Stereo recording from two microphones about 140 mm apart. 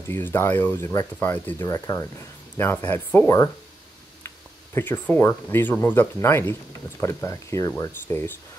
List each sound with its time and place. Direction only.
0.1 s speech: 15° left (ahead or behind)
4.7 s speech: 15° left (ahead or behind)